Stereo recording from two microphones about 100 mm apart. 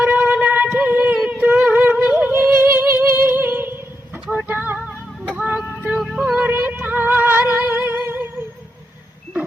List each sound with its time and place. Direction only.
0.0 s a sound: 20° right (ahead or behind)
4.9 s music: 15° right (ahead or behind)
6.0 s music: 5° right (ahead or behind)
6.4 s music: 20° right (ahead or behind)